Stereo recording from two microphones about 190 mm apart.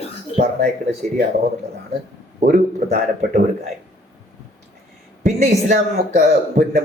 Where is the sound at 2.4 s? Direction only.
45° right (ahead or behind).